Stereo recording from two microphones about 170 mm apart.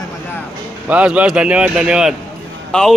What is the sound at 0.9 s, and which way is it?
Speech, 10° right (ahead or behind).